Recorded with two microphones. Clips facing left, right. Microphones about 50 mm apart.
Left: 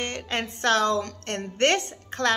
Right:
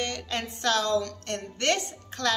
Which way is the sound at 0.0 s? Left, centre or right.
Left.